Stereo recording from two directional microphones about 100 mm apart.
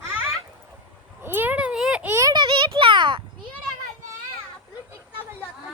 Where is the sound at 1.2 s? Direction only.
20° right (ahead or behind).